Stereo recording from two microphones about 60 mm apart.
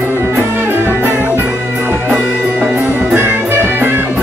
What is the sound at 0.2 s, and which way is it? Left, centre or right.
Music, right.